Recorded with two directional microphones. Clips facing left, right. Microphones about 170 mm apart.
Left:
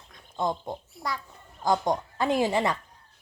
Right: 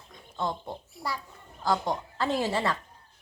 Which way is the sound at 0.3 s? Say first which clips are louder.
Left 3 dB; 15° left (ahead or behind).